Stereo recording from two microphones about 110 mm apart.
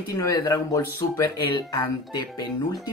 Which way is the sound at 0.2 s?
30° left (ahead or behind).